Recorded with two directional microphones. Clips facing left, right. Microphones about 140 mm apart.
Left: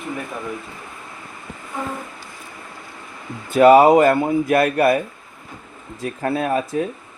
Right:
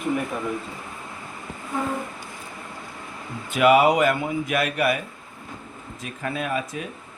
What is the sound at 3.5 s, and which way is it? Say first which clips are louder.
Speech: left 7 dB; 35° left (ahead or behind).